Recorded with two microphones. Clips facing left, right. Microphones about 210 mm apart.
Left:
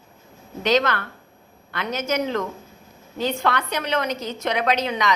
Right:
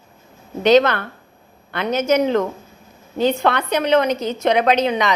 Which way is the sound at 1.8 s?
60° right (ahead or behind).